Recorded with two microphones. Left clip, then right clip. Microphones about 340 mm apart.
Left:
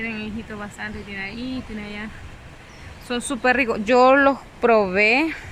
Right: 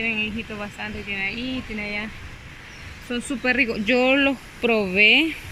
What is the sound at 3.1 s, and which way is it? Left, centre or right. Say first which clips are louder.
Speech: left 4 dB; centre.